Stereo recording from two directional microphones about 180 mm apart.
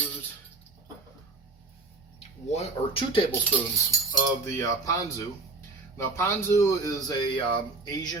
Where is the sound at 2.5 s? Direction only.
35° left (ahead or behind).